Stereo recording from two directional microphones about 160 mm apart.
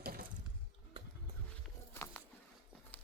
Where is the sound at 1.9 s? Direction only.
15° left (ahead or behind).